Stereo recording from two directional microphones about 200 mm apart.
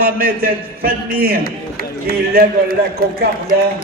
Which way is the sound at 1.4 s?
50° left (ahead or behind).